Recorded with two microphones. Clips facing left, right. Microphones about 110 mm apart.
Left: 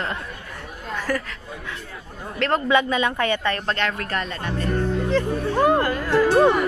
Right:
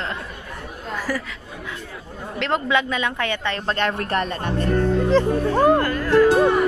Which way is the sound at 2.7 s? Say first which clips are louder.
Left 2 dB; 5° left (ahead or behind).